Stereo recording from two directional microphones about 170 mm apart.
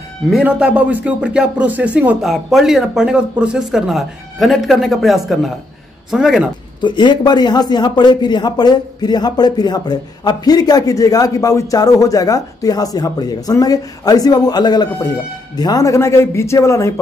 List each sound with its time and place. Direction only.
0.3 s speech: 5° right (ahead or behind)
6.8 s a man's voice: 25° left (ahead or behind)